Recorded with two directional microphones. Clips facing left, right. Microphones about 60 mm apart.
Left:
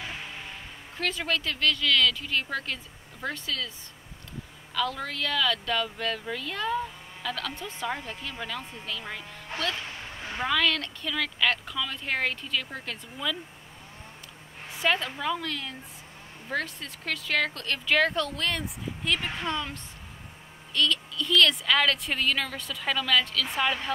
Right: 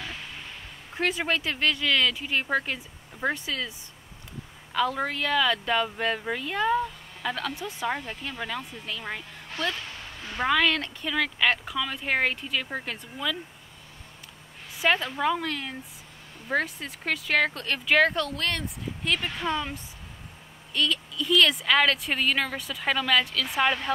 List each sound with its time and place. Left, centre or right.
0.9 s speech: right
4.7 s speech: right; by 7.9 s centre
7.9 s speech: centre
10.4 s speech: centre
13.2 s speech: centre
14.7 s a woman's voice: centre
15.1 s speech: centre
19.4 s speech: centre
23.6 s speech: centre